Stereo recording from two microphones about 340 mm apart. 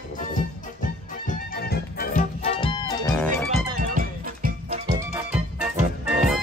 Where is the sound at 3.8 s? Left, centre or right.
Right.